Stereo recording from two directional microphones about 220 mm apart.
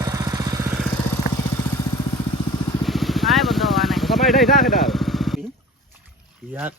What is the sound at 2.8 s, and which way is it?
Vehicle, centre (ahead or behind).